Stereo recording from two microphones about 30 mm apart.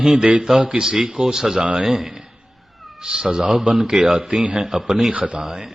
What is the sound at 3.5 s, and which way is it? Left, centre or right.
A man's voice, centre.